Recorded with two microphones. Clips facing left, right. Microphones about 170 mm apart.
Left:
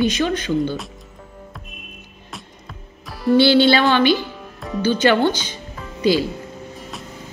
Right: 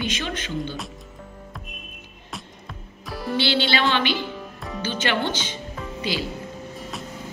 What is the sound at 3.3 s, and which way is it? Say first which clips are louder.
A woman's voice: left 10 dB; 45° left (ahead or behind).